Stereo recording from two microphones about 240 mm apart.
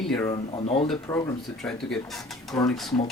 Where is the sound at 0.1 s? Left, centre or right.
Centre.